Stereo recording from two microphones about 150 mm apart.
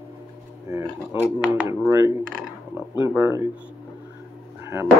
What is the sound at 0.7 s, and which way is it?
Speech, 15° right (ahead or behind).